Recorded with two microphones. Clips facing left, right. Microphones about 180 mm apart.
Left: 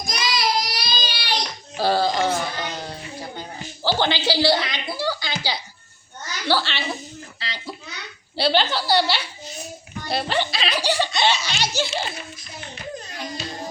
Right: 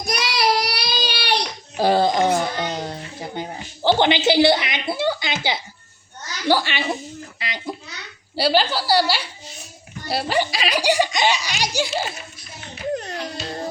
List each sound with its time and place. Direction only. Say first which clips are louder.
0.0 s child singing: right 3 dB; 65° right (ahead or behind)
1.7 s a sound: right 3 dB; 20° right (ahead or behind)
6.5 s a woman's voice: right 3 dB; 15° right (ahead or behind)
7.3 s a sound: right 4 dB; 20° right (ahead or behind)
8.4 s a woman's voice: right 2 dB; 10° right (ahead or behind)
13.0 s music: right 6 dB; 70° right (ahead or behind)